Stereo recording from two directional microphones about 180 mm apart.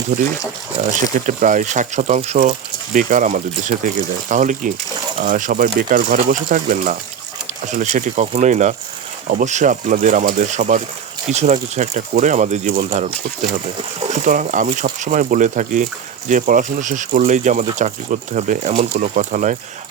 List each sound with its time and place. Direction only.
0.1 s speech: 60° right (ahead or behind)
0.8 s speech: 40° right (ahead or behind)